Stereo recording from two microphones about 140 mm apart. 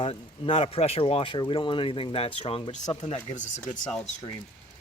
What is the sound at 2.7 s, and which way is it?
Speech, 55° left (ahead or behind).